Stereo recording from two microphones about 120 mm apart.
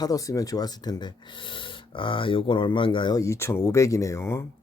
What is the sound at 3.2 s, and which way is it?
Speech, 25° left (ahead or behind).